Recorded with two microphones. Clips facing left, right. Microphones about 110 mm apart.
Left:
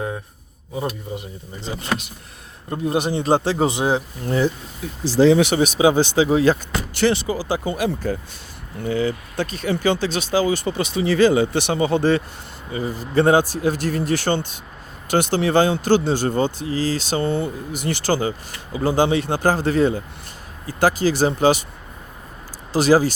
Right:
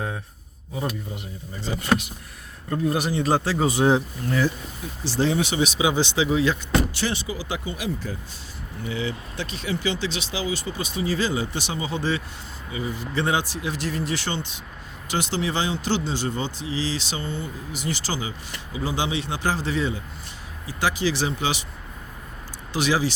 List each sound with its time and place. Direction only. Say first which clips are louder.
1.6 s speech: right 2 dB; 25° left (ahead or behind)
5.1 s speech: left 9 dB; 80° left
5.5 s speech: left 6 dB; 45° left (ahead or behind)
7.0 s speech: left 9 dB; 65° left (ahead or behind)
7.3 s speech: left 7 dB; 35° left (ahead or behind)
7.6 s speech: left 7 dB; 55° left (ahead or behind)
8.8 s speech: left 7 dB; 45° left (ahead or behind)
12.7 s speech: left 8 dB; 45° left (ahead or behind)
22.7 s speech: left 7 dB; 40° left (ahead or behind)